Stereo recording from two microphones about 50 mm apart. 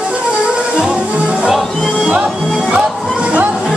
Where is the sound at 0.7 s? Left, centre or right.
Centre.